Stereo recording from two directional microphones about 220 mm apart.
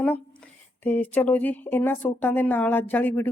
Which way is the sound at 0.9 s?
5° left (ahead or behind).